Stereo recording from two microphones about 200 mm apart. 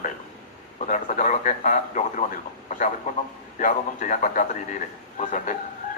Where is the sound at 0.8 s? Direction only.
40° left (ahead or behind).